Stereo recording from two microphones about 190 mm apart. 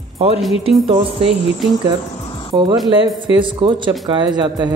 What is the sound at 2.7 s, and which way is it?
Speech, centre (ahead or behind).